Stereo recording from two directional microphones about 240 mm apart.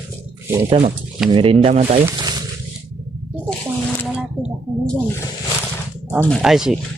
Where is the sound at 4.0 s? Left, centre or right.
Centre.